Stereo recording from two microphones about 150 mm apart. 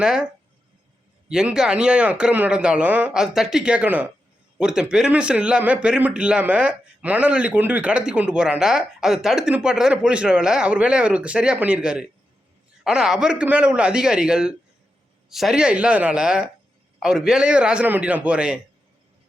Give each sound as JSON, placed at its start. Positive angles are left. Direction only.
{"t": 0.0, "sound": "speech", "side_deg": -5}
{"t": 1.3, "sound": "a man's voice", "side_deg": -5}